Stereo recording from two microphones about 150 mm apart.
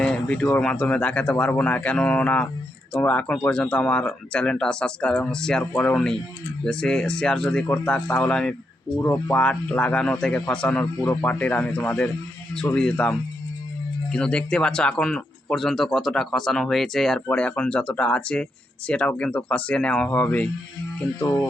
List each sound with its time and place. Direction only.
0.0 s speech: 5° left (ahead or behind)
9.0 s speech: 20° left (ahead or behind)